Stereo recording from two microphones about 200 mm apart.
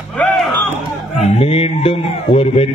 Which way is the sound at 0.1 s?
5° left (ahead or behind).